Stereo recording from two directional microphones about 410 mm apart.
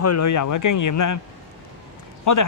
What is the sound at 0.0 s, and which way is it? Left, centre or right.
A man's voice, left.